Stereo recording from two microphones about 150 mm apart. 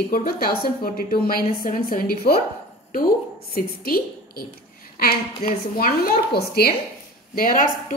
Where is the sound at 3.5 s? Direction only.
80° left.